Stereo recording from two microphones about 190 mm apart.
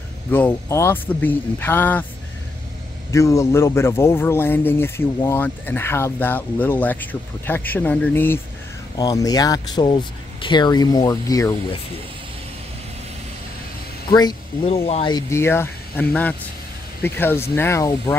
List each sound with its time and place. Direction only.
0.3 s speech: 10° left (ahead or behind)
3.1 s speech: 15° left (ahead or behind)
14.7 s speech: 30° left (ahead or behind)
15.1 s speech: 15° left (ahead or behind)